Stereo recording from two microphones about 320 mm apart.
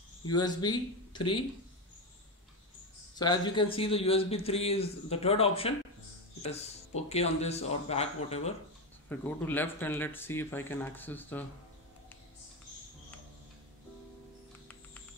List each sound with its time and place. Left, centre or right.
0.3 s a man's voice: centre
3.2 s a man's voice: centre
7.1 s speech: centre
9.1 s a man's voice: centre